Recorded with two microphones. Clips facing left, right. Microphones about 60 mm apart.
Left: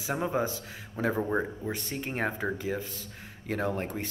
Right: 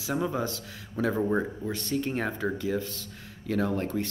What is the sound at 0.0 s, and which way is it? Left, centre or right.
Speech, left.